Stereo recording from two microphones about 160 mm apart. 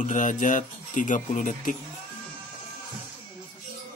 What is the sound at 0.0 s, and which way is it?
Speech, 50° left (ahead or behind).